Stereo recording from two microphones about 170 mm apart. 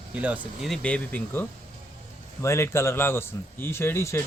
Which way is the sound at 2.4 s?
15° left (ahead or behind).